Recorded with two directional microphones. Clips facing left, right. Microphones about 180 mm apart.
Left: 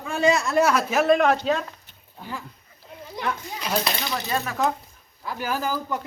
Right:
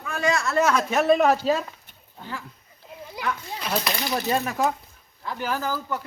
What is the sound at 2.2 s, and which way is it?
Speech, 15° left (ahead or behind).